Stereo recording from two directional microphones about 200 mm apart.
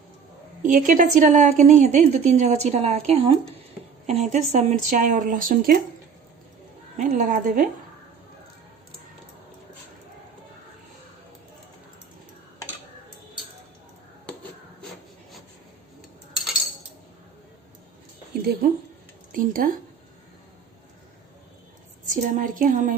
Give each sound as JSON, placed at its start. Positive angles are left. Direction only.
{"t": 0.6, "sound": "a woman's voice", "side_deg": -40}
{"t": 6.9, "sound": "a woman's voice", "side_deg": -40}
{"t": 19.3, "sound": "speech", "side_deg": -45}
{"t": 22.0, "sound": "a woman's voice", "side_deg": -40}